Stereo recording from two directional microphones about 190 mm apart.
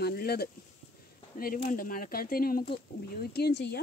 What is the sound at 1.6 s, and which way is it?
Speech, 45° left (ahead or behind).